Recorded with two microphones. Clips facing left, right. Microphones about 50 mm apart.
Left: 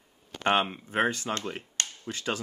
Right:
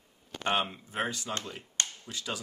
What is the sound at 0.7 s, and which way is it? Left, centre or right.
Speech, left.